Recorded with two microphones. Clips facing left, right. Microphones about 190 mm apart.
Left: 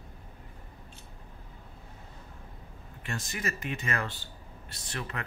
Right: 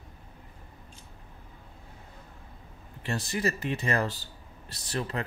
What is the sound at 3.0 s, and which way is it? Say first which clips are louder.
Speech: right 6 dB; 35° right (ahead or behind).